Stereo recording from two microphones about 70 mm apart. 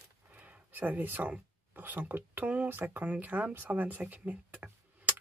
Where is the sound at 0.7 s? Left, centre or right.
Right.